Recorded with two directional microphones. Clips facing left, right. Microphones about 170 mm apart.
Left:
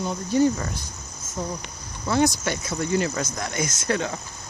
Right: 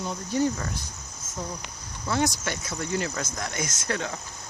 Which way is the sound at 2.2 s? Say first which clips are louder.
Left 5 dB; 10° left (ahead or behind).